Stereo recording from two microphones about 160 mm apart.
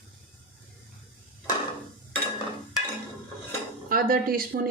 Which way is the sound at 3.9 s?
65° right (ahead or behind).